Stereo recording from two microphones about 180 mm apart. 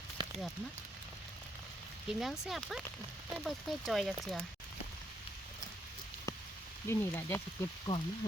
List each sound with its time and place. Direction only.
0.2 s a sound: 25° right (ahead or behind)
2.0 s speech: centre (ahead or behind)
6.8 s speech: 15° left (ahead or behind)